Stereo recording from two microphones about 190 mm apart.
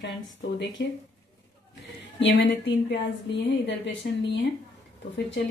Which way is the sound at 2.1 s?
75° left (ahead or behind).